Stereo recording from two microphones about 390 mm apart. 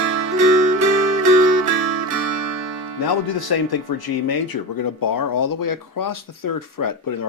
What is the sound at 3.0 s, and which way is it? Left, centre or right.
Speech, left.